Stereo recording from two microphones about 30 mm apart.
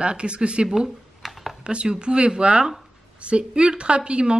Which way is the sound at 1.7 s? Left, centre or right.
Right.